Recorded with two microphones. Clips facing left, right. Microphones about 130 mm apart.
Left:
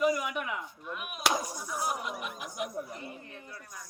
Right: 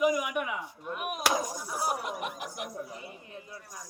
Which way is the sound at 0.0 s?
10° right (ahead or behind).